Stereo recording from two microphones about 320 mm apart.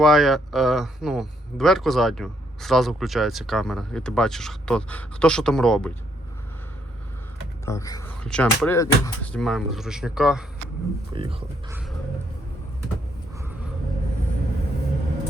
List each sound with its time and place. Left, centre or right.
0.0 s speech: centre
7.6 s speech: centre
11.1 s speech: centre